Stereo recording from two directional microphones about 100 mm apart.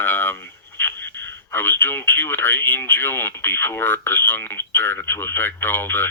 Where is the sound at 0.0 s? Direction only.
20° left (ahead or behind).